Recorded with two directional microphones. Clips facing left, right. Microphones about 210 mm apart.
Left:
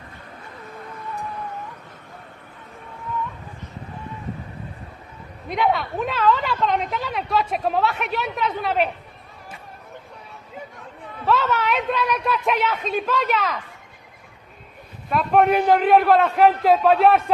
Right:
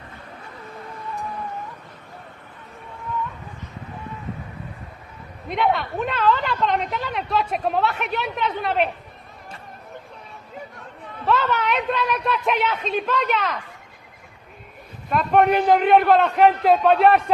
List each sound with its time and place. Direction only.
5.5 s a woman's voice: centre (ahead or behind)
11.2 s a woman's voice: centre (ahead or behind)
15.0 s a woman's voice: centre (ahead or behind)